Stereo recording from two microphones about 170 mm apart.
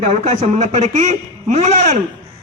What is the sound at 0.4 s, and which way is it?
Speech, 40° right (ahead or behind).